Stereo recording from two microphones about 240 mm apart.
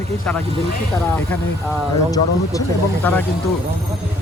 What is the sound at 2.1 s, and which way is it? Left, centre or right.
Speech, centre.